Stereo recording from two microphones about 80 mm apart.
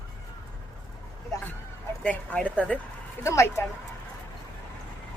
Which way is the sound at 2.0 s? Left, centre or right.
Centre.